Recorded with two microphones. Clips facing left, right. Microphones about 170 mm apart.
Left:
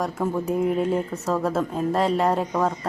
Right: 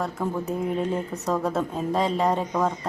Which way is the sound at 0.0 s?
10° left (ahead or behind).